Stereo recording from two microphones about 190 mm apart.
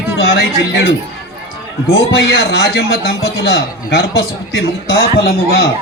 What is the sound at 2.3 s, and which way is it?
A man's voice, 55° left (ahead or behind).